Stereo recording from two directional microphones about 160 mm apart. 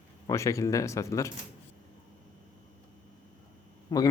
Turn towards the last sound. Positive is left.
turn(degrees=25)  # may be behind; listen again after turning